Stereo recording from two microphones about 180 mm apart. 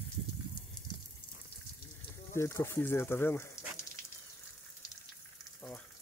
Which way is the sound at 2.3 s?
15° left (ahead or behind).